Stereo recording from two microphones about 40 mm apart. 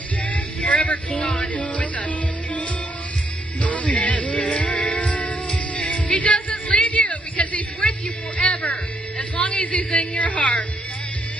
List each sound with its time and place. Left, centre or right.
0.3 s vehicle: left
1.3 s music: left
3.6 s music: left
8.4 s music: left
9.4 s a sound: left
9.8 s speech: left